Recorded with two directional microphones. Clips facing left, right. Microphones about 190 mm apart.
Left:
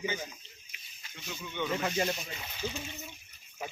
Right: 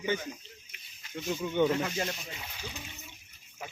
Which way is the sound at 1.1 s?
45° right (ahead or behind).